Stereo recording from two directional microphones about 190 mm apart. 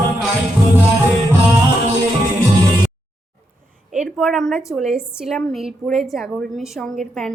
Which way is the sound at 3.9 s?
Centre (ahead or behind).